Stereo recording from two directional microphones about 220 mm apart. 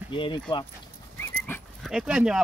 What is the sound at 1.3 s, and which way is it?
Dog, 10° left (ahead or behind).